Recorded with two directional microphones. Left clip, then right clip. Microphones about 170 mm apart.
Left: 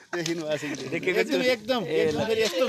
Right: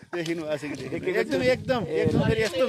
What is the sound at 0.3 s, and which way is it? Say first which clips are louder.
Speech: left 1 dB; 30° right (ahead or behind).